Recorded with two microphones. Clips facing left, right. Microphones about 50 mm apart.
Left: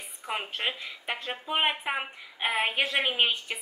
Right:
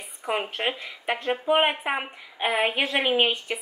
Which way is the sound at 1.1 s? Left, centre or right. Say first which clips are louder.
Right 9 dB; right.